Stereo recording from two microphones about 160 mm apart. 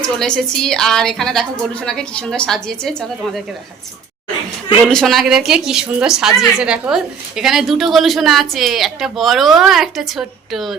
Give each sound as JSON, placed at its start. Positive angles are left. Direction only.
{"t": 0.2, "sound": "a woman's voice", "side_deg": 5}
{"t": 4.9, "sound": "a woman's voice", "side_deg": 0}